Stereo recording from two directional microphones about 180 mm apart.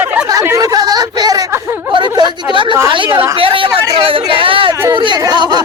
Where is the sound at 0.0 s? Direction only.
10° right (ahead or behind).